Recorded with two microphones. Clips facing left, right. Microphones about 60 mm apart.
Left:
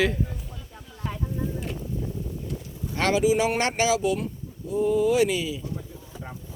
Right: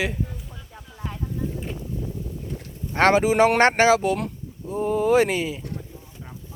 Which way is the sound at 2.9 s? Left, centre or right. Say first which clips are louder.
Right 4 dB; right.